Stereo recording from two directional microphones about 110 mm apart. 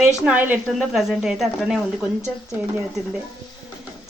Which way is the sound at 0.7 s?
Centre (ahead or behind).